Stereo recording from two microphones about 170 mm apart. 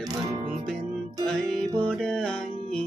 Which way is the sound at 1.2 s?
5° left (ahead or behind).